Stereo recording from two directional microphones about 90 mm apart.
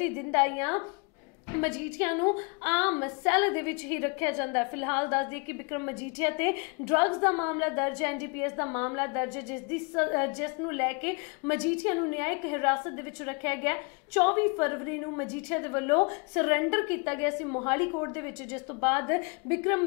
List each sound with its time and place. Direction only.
0.0 s a woman's voice: 25° left (ahead or behind)